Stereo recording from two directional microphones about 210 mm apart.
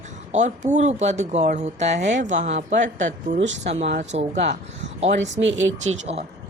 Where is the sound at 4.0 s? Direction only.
35° right (ahead or behind).